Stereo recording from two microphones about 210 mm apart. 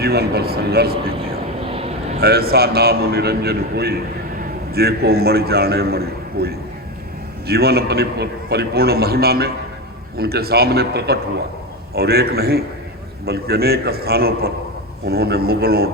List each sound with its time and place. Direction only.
0.0 s a man's voice: 50° right (ahead or behind)
1.6 s vehicle: 30° right (ahead or behind)
2.2 s a man's voice: 45° right (ahead or behind)